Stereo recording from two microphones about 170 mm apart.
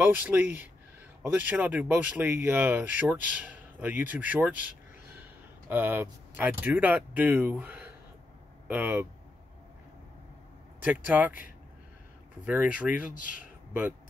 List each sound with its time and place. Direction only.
0.0 s speech: 10° right (ahead or behind)
10.8 s speech: 10° right (ahead or behind)
12.4 s speech: 10° right (ahead or behind)
13.1 s speech: 55° left (ahead or behind)
13.4 s a sound: 10° right (ahead or behind)